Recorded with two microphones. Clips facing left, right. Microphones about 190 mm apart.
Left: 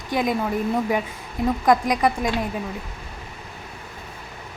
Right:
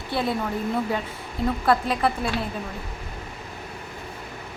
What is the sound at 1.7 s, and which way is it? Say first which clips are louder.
Speech: left 3 dB; 15° left (ahead or behind).